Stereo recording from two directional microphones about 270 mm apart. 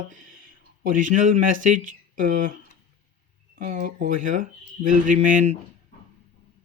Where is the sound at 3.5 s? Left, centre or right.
Right.